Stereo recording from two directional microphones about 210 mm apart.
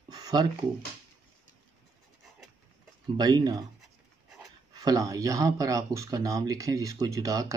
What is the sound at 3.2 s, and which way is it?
Speech, 20° right (ahead or behind).